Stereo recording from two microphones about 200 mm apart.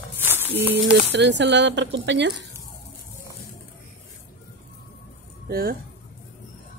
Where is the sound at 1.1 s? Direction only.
60° right (ahead or behind).